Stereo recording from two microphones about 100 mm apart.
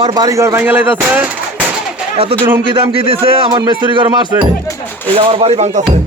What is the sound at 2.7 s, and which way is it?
Speech, 60° right (ahead or behind).